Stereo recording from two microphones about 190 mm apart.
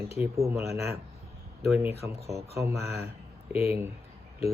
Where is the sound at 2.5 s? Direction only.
15° right (ahead or behind).